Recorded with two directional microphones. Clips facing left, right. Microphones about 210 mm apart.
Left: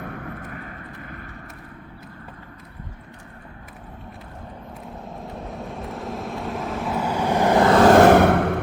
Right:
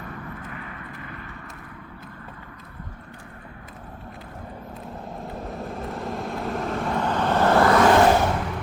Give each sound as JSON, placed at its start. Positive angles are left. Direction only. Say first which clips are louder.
{"t": 0.0, "sound": "vehicle", "louder": "left 3 dB", "side_deg": 60}
{"t": 5.0, "sound": "vehicle", "louder": "right 1 dB", "side_deg": 0}
{"t": 7.9, "sound": "a sound", "louder": "left 5 dB", "side_deg": 60}